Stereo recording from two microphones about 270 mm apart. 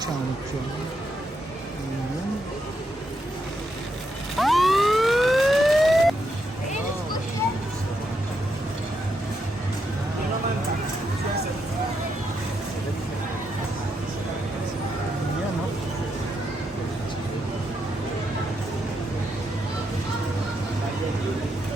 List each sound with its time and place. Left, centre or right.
4.4 s emergency vehicle: centre